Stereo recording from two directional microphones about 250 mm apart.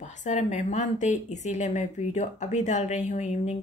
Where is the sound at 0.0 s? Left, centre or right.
Left.